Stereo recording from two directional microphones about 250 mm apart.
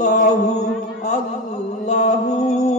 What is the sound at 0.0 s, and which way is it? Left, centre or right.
Chant, left.